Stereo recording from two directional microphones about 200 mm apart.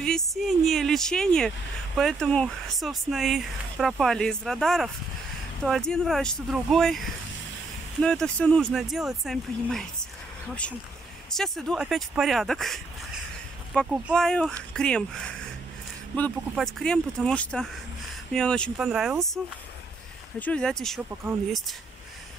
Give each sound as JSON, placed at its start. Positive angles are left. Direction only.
{"t": 0.0, "sound": "speech", "side_deg": 0}
{"t": 8.0, "sound": "speech", "side_deg": 5}
{"t": 11.3, "sound": "speech", "side_deg": 0}
{"t": 14.0, "sound": "speech", "side_deg": 5}